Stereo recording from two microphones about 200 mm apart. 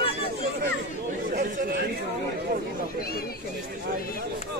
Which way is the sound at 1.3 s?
45° right (ahead or behind).